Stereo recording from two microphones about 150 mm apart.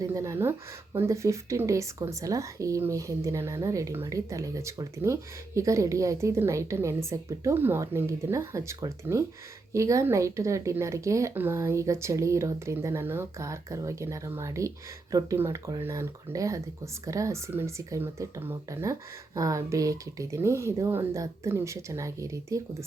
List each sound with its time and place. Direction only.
0.0 s speech: 20° right (ahead or behind)